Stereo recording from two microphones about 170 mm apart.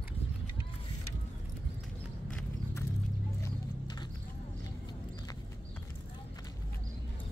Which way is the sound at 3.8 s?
25° left (ahead or behind).